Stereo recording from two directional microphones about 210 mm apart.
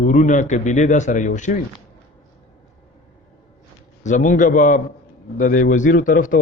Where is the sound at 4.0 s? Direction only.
35° left (ahead or behind).